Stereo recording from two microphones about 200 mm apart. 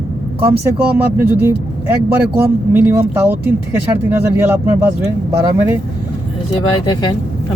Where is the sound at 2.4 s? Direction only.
10° right (ahead or behind).